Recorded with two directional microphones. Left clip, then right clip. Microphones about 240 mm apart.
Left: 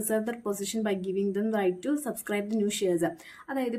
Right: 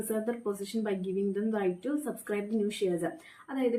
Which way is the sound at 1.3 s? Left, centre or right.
Left.